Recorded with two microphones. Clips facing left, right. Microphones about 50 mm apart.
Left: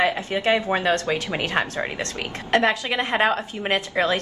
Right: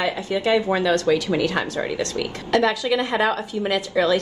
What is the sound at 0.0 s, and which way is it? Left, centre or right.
Speech, left.